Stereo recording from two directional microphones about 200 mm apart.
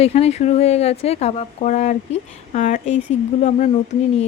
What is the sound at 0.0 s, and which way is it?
Speech, 30° left (ahead or behind).